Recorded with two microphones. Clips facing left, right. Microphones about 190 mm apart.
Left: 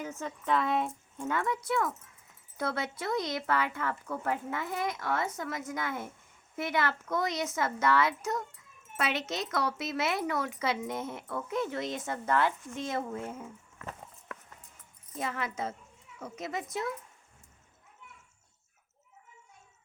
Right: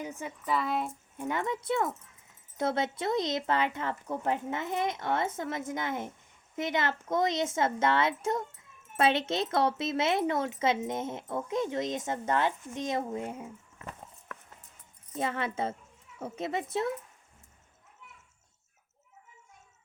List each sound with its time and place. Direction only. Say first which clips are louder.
0.0 s a woman's voice: even; 15° right (ahead or behind)
1.2 s speech: even; 20° right (ahead or behind)
15.2 s speech: right 3 dB; 25° right (ahead or behind)